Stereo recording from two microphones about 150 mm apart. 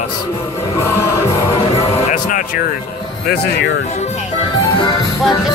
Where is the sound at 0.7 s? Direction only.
15° left (ahead or behind).